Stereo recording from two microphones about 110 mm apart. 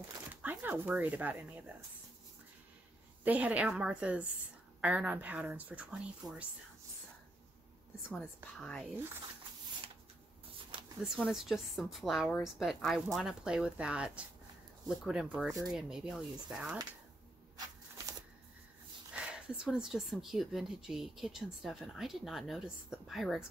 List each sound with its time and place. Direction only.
0.4 s speech: 15° right (ahead or behind)
3.3 s speech: 15° right (ahead or behind)
8.1 s speech: 10° left (ahead or behind)
11.2 s speech: 5° right (ahead or behind)
17.6 s a sound: 30° right (ahead or behind)
19.1 s speech: 10° right (ahead or behind)